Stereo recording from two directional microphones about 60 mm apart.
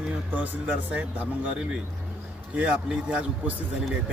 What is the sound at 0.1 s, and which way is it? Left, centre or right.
Speech, right.